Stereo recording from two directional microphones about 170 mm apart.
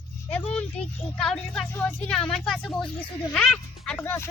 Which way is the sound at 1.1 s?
5° left (ahead or behind).